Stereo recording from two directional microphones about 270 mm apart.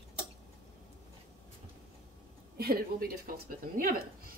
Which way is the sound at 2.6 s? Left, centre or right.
Right.